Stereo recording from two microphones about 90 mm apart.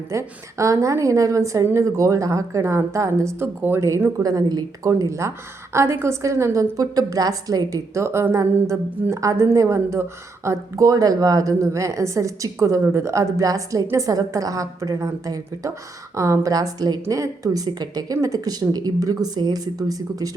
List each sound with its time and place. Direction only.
0.1 s speech: 35° right (ahead or behind)